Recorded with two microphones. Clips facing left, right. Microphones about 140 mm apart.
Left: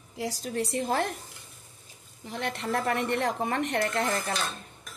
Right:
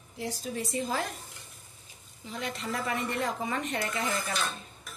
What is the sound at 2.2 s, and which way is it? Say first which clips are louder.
A woman's voice: left 3 dB; 65° left (ahead or behind).